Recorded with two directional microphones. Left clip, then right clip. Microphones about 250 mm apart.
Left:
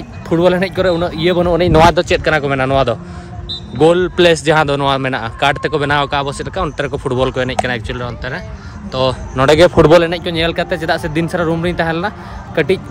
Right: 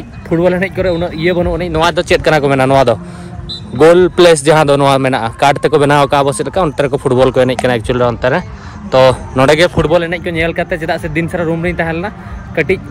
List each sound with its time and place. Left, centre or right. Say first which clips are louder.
0.3 s speech: even; centre
1.5 s speech: left 3 dB; left
2.1 s speech: right 4 dB; centre
9.8 s speech: left 4 dB; left
10.0 s speech: right 1 dB; centre